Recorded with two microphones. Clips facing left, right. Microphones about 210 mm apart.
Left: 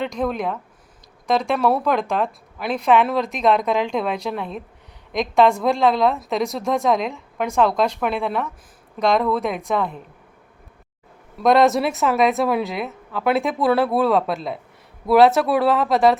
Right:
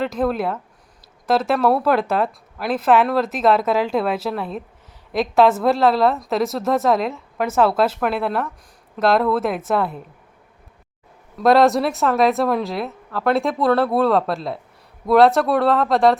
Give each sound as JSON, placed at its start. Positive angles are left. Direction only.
{"t": 0.0, "sound": "a woman's voice", "side_deg": -5}
{"t": 11.3, "sound": "a woman's voice", "side_deg": 0}